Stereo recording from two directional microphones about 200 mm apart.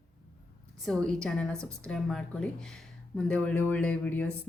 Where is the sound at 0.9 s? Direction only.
5° left (ahead or behind).